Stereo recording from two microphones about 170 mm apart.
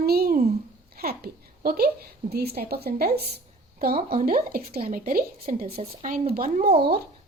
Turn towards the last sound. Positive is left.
turn(degrees=-65)  # may be behind; listen again after turning